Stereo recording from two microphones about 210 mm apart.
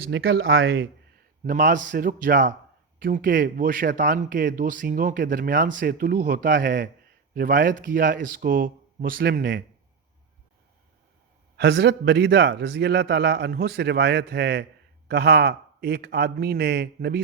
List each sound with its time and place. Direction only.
0.4 s speech: 70° right (ahead or behind)
1.5 s speech: 40° right (ahead or behind)
11.5 s a man's voice: 55° right (ahead or behind)